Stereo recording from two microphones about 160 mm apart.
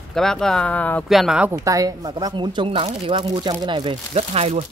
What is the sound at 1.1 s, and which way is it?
Speech, centre (ahead or behind).